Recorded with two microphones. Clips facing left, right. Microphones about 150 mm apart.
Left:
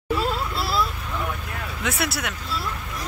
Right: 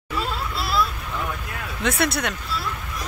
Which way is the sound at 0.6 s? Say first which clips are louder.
Right 3 dB; 30° left (ahead or behind).